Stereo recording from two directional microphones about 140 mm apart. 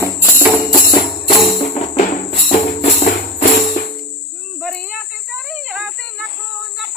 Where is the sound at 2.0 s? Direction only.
60° left (ahead or behind).